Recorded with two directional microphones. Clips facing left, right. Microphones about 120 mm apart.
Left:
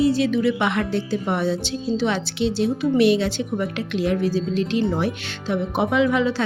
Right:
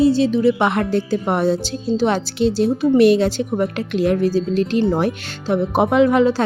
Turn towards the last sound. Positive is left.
turn(degrees=-45)  # may be behind; listen again after turning